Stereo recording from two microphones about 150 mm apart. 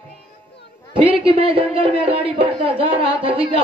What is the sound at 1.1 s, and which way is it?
Speech, 40° right (ahead or behind).